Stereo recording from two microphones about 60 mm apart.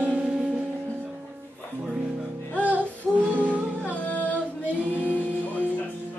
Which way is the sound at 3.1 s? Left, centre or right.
Right.